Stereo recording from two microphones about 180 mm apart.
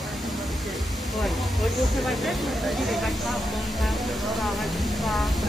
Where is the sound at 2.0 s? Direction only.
Centre (ahead or behind).